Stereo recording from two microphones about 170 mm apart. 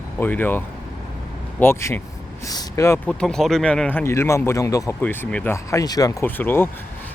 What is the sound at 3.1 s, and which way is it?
Speech, 5° left (ahead or behind).